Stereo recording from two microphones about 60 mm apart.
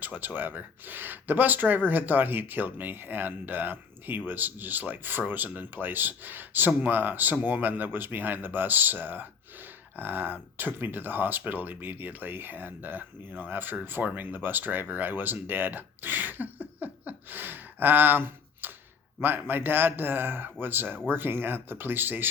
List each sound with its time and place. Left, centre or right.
0.0 s speech: right